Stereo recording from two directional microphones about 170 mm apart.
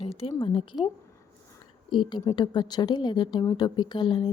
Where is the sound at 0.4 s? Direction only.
30° left (ahead or behind).